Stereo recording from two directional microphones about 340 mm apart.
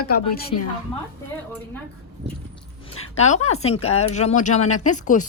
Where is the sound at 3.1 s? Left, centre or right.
Centre.